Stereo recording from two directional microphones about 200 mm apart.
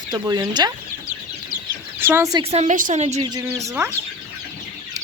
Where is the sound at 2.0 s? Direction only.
10° right (ahead or behind).